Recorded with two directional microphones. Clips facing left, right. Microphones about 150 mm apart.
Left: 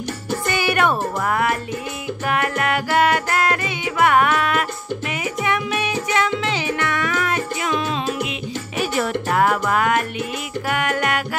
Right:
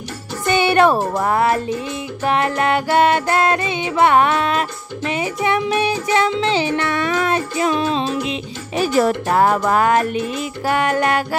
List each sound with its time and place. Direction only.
0.5 s speech: 25° right (ahead or behind)
2.2 s music: 25° right (ahead or behind)